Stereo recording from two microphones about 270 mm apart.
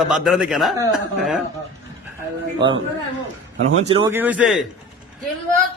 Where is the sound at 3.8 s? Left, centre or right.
Centre.